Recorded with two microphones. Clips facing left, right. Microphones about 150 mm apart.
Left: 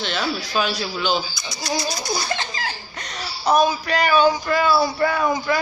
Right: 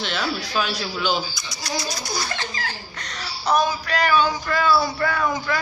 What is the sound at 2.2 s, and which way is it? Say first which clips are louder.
A woman's voice: left 3 dB; 25° left (ahead or behind).